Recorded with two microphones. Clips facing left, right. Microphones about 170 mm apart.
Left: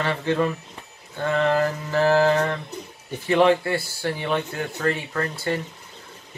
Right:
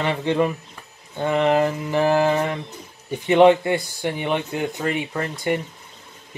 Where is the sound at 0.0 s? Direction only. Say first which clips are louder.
Right 2 dB; 20° right (ahead or behind).